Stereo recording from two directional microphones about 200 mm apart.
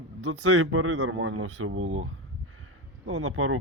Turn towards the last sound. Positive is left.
turn(degrees=-90)